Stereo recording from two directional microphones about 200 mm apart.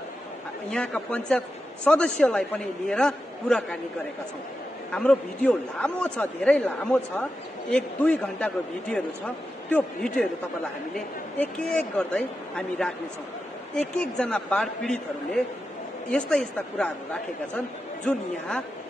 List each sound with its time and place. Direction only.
0.7 s a man's voice: 5° left (ahead or behind)
4.9 s a man's voice: 5° left (ahead or behind)
11.3 s a man's voice: 5° left (ahead or behind)